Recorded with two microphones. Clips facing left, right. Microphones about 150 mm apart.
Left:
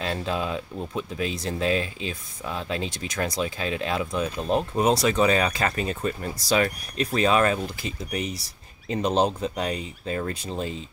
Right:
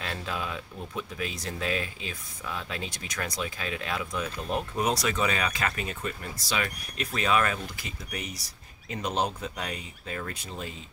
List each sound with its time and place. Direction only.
0.0 s speech: 25° left (ahead or behind)